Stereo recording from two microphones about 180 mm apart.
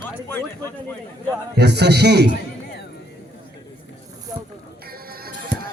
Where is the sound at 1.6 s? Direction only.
70° right (ahead or behind).